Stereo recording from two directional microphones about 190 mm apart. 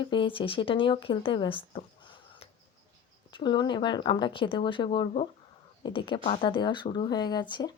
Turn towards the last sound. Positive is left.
turn(degrees=25)  # may be behind; listen again after turning